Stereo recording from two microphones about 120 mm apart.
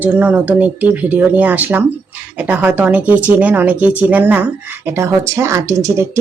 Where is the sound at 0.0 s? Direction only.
15° right (ahead or behind).